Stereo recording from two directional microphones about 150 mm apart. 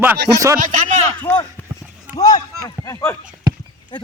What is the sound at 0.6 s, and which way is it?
Speech, 60° right (ahead or behind).